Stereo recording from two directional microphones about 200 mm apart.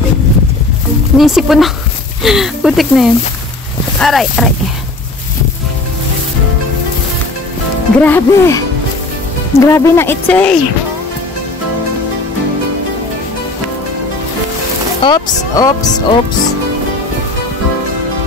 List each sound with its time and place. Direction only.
1.1 s speech: centre (ahead or behind)
8.0 s speech: 10° left (ahead or behind)
15.0 s speech: 20° left (ahead or behind)